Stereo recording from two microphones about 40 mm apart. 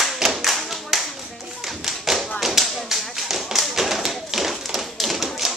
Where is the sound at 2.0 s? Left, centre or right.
Centre.